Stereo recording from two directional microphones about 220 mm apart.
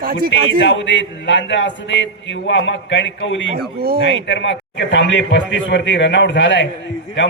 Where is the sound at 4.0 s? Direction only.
55° left (ahead or behind).